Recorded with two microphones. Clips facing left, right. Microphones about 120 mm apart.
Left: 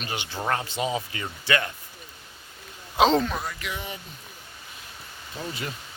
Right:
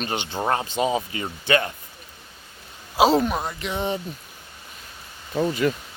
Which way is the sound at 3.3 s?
25° right (ahead or behind).